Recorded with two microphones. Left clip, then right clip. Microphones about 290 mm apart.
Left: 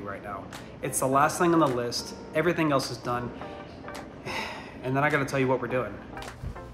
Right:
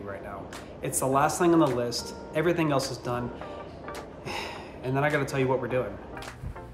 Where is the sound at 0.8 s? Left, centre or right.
Centre.